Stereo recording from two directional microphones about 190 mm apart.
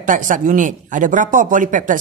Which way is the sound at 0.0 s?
45° right (ahead or behind).